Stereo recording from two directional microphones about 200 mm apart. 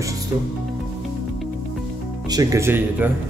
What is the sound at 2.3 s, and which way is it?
Speech, 15° right (ahead or behind).